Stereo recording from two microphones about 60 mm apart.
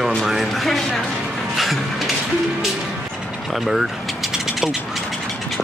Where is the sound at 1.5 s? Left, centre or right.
Centre.